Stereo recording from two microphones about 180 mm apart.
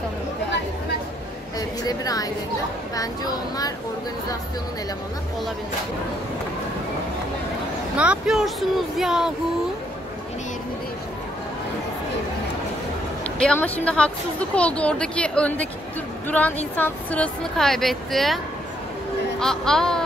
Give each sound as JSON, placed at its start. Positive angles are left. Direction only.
{"t": 1.9, "sound": "a child's voice", "side_deg": 20}
{"t": 8.0, "sound": "speech", "side_deg": -5}
{"t": 13.4, "sound": "a woman's voice", "side_deg": 5}
{"t": 19.4, "sound": "speech", "side_deg": 5}